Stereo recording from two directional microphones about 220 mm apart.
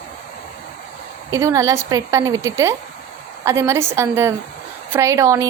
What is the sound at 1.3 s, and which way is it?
Speech, 15° right (ahead or behind).